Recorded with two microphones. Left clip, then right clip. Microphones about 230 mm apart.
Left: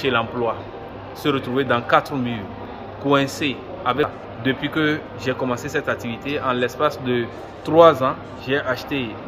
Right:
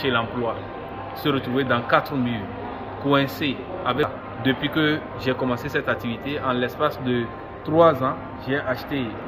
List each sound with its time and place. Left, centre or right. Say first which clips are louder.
0.0 s a man's voice: left 3 dB; centre